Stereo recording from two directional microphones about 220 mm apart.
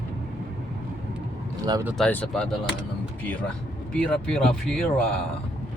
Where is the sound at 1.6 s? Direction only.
15° right (ahead or behind).